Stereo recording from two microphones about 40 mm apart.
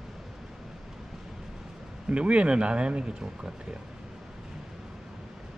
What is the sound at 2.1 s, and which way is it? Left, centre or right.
Speech, right.